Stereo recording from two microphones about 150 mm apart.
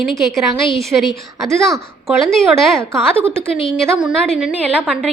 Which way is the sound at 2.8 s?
20° right (ahead or behind).